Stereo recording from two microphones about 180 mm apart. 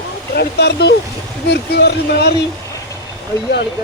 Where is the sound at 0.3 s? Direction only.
70° left (ahead or behind).